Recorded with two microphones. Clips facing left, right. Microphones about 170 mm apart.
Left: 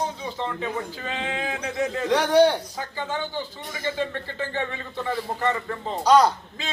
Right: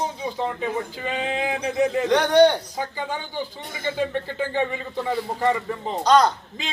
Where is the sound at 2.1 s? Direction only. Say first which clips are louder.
Right 1 dB; 5° left (ahead or behind).